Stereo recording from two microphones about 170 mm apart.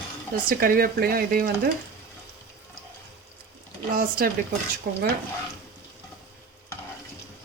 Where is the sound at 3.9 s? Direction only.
55° right (ahead or behind).